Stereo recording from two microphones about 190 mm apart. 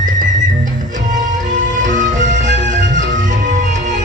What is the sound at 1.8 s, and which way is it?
Music, 40° right (ahead or behind).